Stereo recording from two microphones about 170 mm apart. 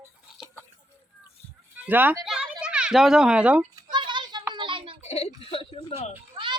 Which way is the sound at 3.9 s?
25° right (ahead or behind).